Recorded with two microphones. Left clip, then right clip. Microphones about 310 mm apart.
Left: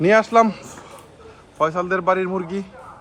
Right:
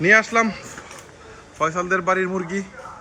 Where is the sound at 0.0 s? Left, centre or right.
Centre.